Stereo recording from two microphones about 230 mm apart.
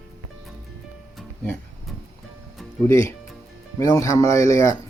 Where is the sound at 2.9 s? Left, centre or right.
Centre.